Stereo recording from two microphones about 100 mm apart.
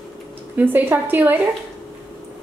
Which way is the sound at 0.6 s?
20° right (ahead or behind).